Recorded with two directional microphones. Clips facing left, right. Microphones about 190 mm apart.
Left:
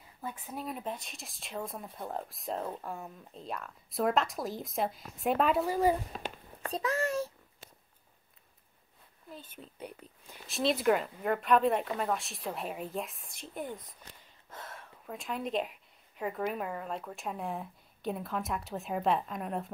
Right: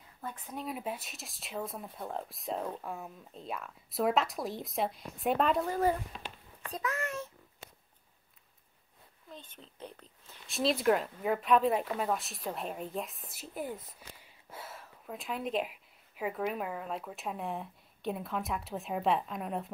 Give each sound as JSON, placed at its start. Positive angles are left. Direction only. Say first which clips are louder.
{"t": 0.2, "sound": "speech", "louder": "left 1 dB", "side_deg": 5}
{"t": 6.1, "sound": "a sound", "louder": "left 5 dB", "side_deg": 45}
{"t": 6.7, "sound": "a child's voice", "louder": "left 5 dB", "side_deg": 30}
{"t": 9.3, "sound": "speech", "louder": "left 3 dB", "side_deg": 10}
{"t": 10.5, "sound": "speech", "louder": "even", "side_deg": 0}